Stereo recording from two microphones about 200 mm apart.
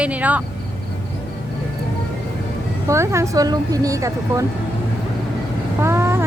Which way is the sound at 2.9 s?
15° right (ahead or behind).